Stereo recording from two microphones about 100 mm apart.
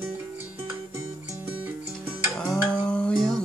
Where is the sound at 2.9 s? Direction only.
10° left (ahead or behind).